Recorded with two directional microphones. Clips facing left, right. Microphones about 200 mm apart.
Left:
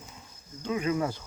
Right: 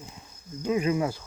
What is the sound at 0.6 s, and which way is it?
Speech, 15° right (ahead or behind).